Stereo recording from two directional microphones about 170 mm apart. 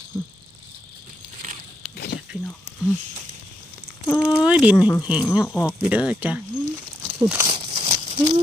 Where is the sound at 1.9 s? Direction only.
70° left (ahead or behind).